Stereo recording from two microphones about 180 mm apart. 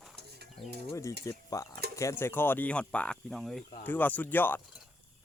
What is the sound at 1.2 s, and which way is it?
Speech, 20° left (ahead or behind).